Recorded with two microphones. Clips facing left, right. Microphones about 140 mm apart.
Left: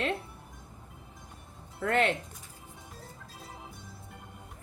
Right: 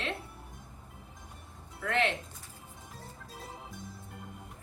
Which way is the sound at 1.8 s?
45° left (ahead or behind).